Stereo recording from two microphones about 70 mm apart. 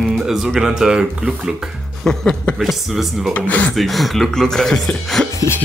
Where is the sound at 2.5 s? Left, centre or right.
Centre.